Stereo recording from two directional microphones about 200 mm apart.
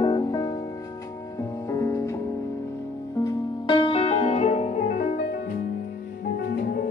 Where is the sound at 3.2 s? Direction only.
20° left (ahead or behind); by 6.9 s 50° left (ahead or behind).